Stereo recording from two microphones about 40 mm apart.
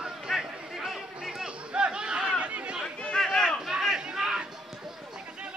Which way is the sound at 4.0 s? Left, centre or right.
Centre.